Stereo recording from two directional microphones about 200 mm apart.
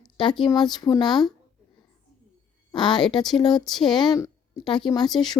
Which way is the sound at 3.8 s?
20° left (ahead or behind).